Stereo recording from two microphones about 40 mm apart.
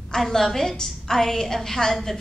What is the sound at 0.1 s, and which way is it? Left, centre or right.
A woman's voice, centre.